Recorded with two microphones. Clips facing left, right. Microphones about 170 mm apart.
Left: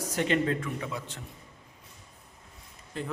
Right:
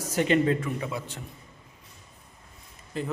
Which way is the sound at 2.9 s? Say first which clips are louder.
Right 4 dB; 5° right (ahead or behind).